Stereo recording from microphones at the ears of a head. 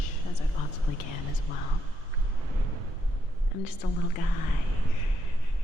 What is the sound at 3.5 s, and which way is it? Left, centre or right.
Speech, left.